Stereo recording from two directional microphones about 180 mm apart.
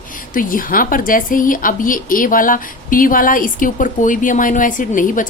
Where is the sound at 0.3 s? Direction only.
50° left (ahead or behind).